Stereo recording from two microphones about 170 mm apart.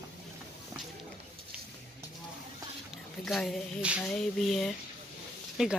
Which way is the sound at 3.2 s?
Centre (ahead or behind).